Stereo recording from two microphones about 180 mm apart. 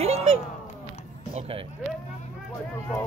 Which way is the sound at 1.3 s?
30° right (ahead or behind).